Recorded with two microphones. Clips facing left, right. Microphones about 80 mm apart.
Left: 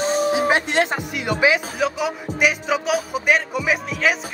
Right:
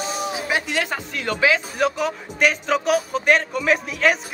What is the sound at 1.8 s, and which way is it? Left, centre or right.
Speech, centre.